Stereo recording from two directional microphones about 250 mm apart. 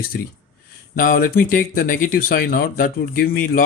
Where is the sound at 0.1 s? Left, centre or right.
Left.